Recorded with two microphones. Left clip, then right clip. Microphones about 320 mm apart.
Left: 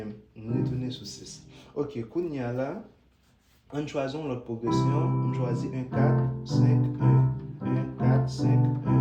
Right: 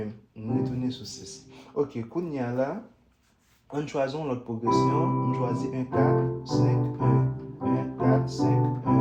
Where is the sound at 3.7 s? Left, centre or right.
Centre.